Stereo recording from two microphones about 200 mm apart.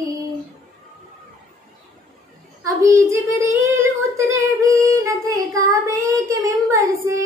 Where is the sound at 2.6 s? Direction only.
15° right (ahead or behind).